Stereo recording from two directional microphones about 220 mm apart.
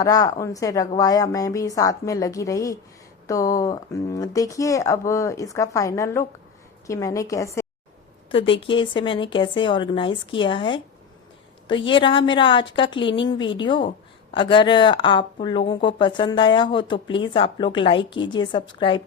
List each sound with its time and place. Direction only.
0.0 s speech: 15° left (ahead or behind)
8.3 s speech: 25° left (ahead or behind)
11.9 s speech: 20° left (ahead or behind)